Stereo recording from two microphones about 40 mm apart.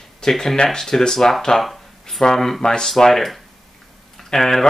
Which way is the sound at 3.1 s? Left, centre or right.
Centre.